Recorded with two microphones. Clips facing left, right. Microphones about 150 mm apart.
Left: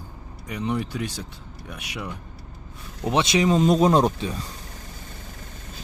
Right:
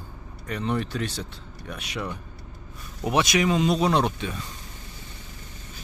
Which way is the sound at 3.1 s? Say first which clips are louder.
Left 2 dB; 30° left (ahead or behind).